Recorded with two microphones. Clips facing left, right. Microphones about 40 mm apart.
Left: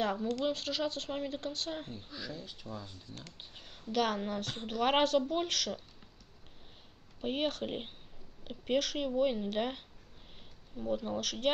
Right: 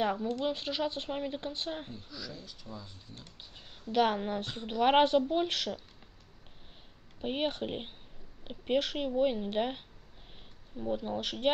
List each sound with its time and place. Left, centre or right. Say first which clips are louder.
0.0 s speech: right 1 dB; centre
2.0 s speech: left 1 dB; left
3.9 s a woman's voice: right 4 dB; right
7.2 s speech: right 1 dB; centre